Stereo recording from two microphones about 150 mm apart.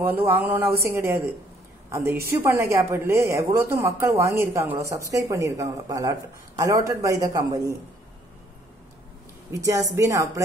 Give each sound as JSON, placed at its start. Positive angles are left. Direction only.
{"t": 0.0, "sound": "a woman's voice", "side_deg": -15}
{"t": 9.5, "sound": "speech", "side_deg": -20}